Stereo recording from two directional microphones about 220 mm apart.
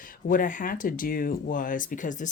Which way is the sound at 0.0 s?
40° left (ahead or behind).